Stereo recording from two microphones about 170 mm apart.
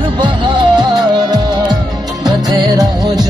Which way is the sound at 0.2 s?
25° right (ahead or behind).